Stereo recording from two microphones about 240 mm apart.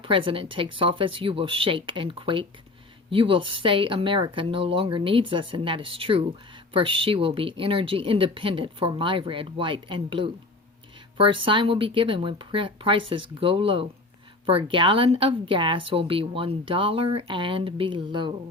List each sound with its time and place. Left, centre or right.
0.0 s speech: right